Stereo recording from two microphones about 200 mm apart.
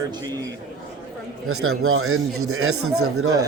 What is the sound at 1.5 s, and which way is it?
A man's voice, 90° right.